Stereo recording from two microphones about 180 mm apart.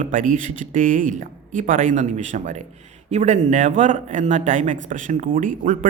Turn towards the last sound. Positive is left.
turn(degrees=-45)  # may be behind; listen again after turning